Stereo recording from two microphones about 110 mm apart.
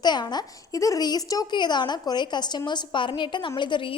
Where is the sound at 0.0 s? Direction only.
40° left (ahead or behind).